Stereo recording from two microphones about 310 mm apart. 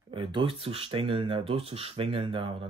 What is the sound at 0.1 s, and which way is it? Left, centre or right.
Speech, centre.